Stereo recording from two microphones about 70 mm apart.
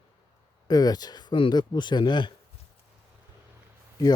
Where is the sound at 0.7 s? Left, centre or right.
Left.